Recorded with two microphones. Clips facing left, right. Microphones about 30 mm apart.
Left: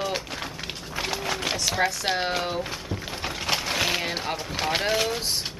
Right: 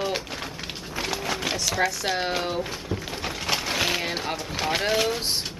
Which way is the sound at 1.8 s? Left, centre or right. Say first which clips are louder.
Even; centre.